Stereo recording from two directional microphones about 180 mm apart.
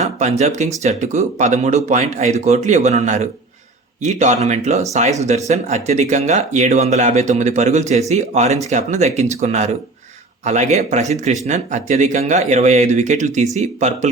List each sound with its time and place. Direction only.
0.2 s speech: 40° right (ahead or behind)